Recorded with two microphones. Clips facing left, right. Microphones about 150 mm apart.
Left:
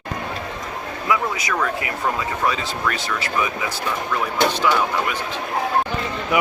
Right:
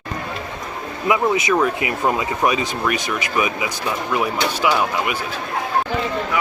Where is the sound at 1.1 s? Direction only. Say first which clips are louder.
Right 5 dB; 20° right (ahead or behind).